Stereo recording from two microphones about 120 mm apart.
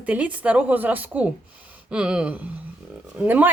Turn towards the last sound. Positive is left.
turn(degrees=-15)  # may be behind; listen again after turning